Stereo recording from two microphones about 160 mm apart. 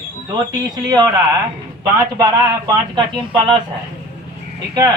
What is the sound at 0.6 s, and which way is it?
Speech, 25° right (ahead or behind).